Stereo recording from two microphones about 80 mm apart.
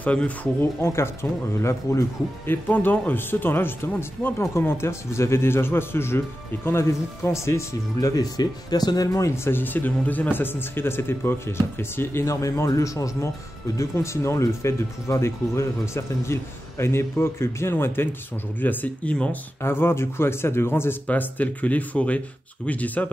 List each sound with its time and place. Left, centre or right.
0.0 s speech: centre
0.6 s speech: left
2.4 s speech: left
8.1 s speech: left; by 23.0 s centre